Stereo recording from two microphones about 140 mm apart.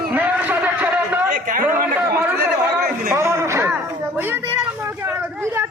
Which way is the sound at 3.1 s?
20° right (ahead or behind).